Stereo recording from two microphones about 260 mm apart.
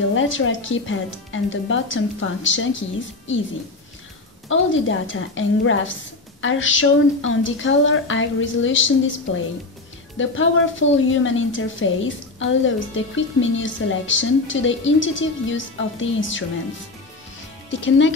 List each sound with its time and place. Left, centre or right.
0.1 s a woman's voice: left
4.5 s a woman's voice: left
17.6 s speech: left